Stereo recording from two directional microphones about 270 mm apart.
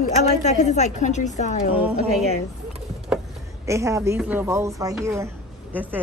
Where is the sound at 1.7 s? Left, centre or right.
Centre.